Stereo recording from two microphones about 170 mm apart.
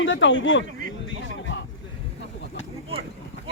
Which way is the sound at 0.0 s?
90° left.